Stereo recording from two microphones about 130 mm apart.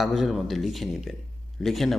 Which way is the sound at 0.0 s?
Centre (ahead or behind).